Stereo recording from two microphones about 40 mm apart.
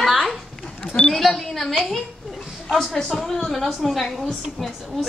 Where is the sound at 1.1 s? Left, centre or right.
Centre.